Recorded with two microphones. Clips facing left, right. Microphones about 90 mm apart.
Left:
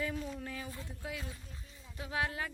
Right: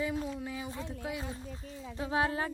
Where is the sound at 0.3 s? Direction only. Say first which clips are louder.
Right 4 dB; 10° right (ahead or behind).